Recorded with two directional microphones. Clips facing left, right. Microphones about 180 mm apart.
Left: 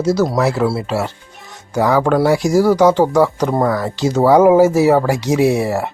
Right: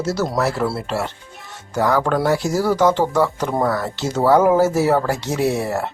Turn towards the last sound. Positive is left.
turn(degrees=10)  # may be behind; listen again after turning